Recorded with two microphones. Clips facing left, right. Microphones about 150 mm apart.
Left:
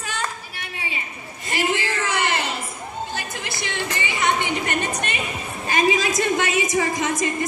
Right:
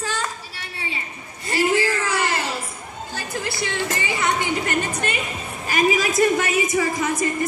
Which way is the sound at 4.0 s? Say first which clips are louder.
Left 3 dB; 20° left (ahead or behind).